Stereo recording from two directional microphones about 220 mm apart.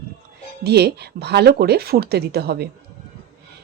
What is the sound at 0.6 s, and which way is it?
Speech, 45° right (ahead or behind).